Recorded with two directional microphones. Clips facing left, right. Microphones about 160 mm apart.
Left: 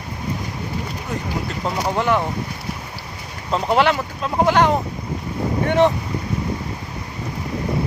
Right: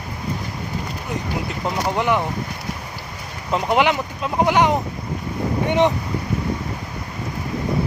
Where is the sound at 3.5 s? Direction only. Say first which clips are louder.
Left 1 dB; 15° right (ahead or behind).